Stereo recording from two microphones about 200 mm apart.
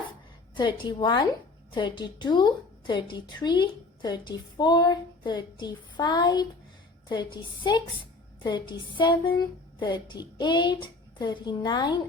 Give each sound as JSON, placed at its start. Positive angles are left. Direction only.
{"t": 0.5, "sound": "a woman's voice", "side_deg": 20}